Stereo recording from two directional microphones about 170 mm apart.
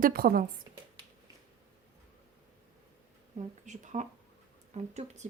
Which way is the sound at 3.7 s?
45° right (ahead or behind).